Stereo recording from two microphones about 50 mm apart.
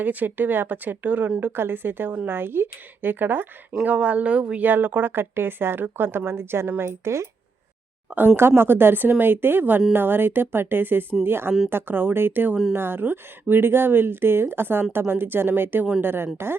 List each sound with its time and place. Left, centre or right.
0.0 s speech: right
1.4 s speech: right
3.8 s speech: right
4.6 s speech: right
8.4 s speech: right